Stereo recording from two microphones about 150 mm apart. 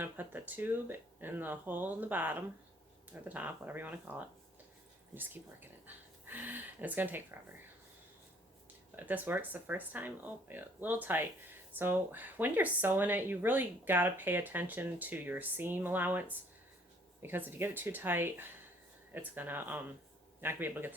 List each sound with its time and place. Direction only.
0.0 s speech: 10° right (ahead or behind)
9.0 s speech: 10° right (ahead or behind)
17.2 s speech: 15° right (ahead or behind)